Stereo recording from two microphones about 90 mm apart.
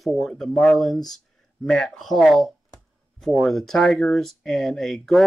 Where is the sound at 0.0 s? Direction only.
5° left (ahead or behind).